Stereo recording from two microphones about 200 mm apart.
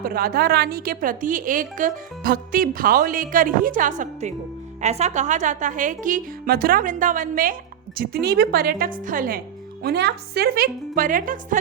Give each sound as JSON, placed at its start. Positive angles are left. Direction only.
{"t": 0.0, "sound": "a woman's voice", "side_deg": -45}
{"t": 9.8, "sound": "a woman's voice", "side_deg": -55}